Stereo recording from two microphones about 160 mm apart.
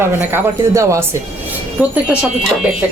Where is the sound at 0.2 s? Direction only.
15° right (ahead or behind).